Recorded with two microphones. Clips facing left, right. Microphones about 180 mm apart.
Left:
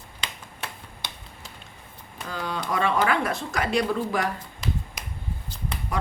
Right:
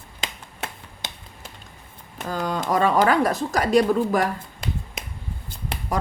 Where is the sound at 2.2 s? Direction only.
45° right (ahead or behind).